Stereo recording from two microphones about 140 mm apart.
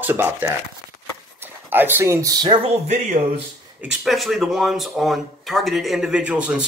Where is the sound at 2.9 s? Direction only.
50° right (ahead or behind).